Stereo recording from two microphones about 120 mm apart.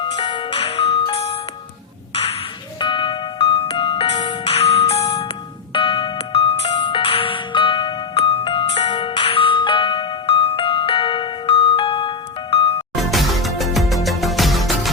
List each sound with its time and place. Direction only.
0.0 s music: 40° left (ahead or behind)
2.8 s music: 45° left (ahead or behind)
4.5 s music: 55° left (ahead or behind)
13.0 s music: centre (ahead or behind)